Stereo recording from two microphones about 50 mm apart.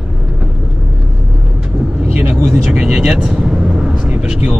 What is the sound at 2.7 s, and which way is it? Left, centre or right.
Vehicle, centre.